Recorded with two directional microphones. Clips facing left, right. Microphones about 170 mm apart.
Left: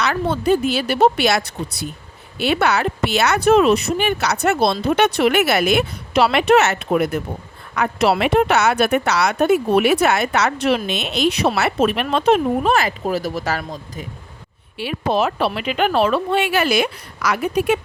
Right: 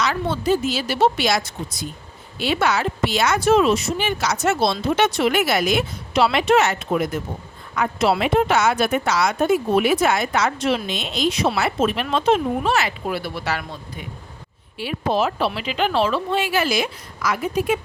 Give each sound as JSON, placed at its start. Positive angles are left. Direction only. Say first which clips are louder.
{"t": 0.0, "sound": "speech", "louder": "left 2 dB", "side_deg": 60}
{"t": 14.8, "sound": "speech", "louder": "left 2 dB", "side_deg": 70}